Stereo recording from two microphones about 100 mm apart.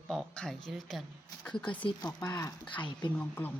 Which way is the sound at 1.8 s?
40° left (ahead or behind).